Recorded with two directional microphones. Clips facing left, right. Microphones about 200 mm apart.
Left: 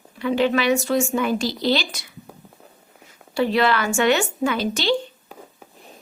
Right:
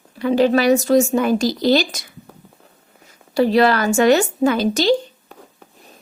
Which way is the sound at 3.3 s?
40° right (ahead or behind).